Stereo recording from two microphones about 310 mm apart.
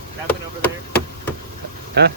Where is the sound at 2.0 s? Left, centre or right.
Right.